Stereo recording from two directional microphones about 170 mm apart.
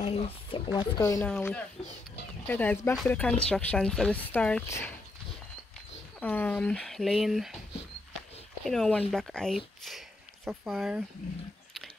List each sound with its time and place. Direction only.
0.0 s speech: 40° left (ahead or behind)
0.7 s speech: 20° left (ahead or behind)
1.2 s speech: 10° left (ahead or behind)
4.6 s speech: 15° left (ahead or behind)
6.1 s speech: 10° left (ahead or behind)
8.6 s speech: centre (ahead or behind)